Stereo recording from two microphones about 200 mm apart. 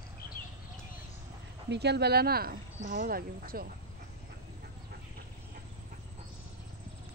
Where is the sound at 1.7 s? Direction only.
55° right (ahead or behind).